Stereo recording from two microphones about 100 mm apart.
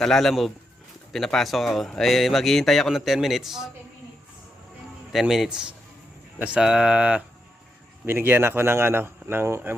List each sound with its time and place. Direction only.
0.0 s a man's voice: 5° left (ahead or behind)
5.2 s speech: 5° right (ahead or behind)
8.0 s speech: 20° right (ahead or behind)